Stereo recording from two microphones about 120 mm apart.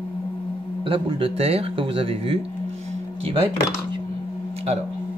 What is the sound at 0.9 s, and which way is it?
Speech, 50° right (ahead or behind).